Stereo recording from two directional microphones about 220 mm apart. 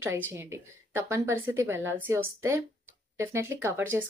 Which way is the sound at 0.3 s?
10° right (ahead or behind).